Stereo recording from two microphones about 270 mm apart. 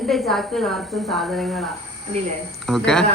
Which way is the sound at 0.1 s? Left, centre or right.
Centre.